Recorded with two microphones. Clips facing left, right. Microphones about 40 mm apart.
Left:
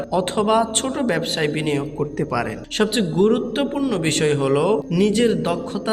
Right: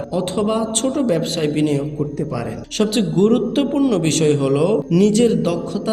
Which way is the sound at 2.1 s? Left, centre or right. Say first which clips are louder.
Left 2 dB; left.